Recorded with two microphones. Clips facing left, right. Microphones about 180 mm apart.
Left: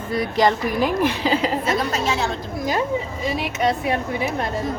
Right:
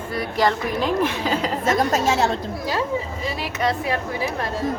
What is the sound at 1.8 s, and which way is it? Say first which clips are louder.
Speech: right 3 dB; 40° right (ahead or behind).